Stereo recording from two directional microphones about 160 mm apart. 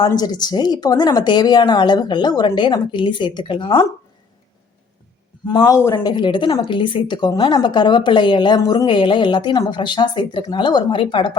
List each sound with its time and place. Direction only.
0.0 s speech: 25° left (ahead or behind)
5.5 s speech: 25° left (ahead or behind)